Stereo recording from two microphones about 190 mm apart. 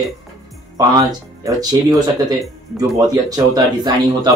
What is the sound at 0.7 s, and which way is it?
Speech, 20° right (ahead or behind).